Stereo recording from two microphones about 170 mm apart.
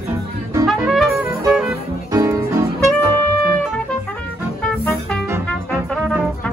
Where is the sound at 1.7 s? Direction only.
20° right (ahead or behind).